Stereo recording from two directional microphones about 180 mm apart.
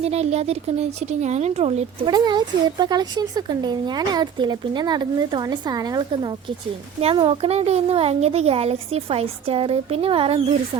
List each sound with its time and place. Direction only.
0.0 s speech: 35° right (ahead or behind)
2.0 s a woman's voice: 25° right (ahead or behind)